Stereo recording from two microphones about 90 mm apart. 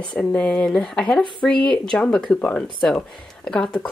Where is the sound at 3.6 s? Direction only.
10° left (ahead or behind).